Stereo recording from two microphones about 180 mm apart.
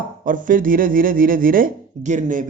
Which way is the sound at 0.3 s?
50° right (ahead or behind).